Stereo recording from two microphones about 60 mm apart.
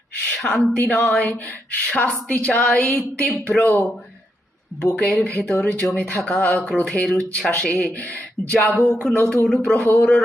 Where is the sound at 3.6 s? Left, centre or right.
Left.